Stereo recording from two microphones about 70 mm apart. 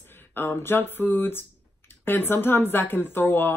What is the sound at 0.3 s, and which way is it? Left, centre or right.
Speech, left.